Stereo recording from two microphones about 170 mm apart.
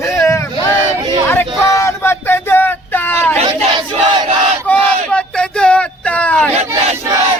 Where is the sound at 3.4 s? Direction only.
30° right (ahead or behind).